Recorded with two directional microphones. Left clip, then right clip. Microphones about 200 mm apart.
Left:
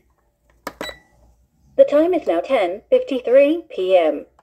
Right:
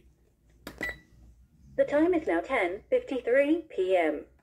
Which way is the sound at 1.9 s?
40° left (ahead or behind).